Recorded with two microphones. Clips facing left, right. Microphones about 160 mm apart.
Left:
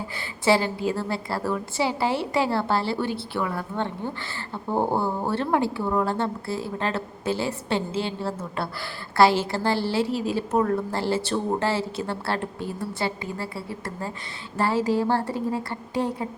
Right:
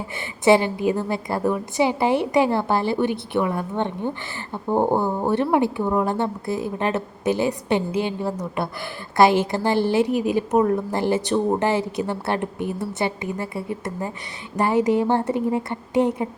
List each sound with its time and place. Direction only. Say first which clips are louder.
0.4 s a woman's voice: right 5 dB; 20° right (ahead or behind)